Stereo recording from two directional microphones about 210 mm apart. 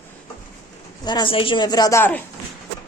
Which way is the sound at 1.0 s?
20° left (ahead or behind).